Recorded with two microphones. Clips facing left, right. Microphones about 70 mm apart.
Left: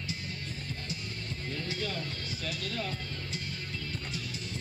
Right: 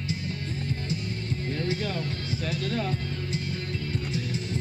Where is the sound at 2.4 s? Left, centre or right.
Right.